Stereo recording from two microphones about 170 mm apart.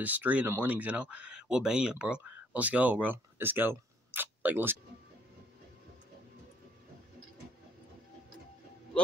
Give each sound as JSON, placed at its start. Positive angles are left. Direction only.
{"t": 0.0, "sound": "speech", "side_deg": -10}